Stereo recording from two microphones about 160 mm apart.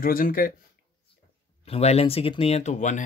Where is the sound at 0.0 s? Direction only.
60° left (ahead or behind).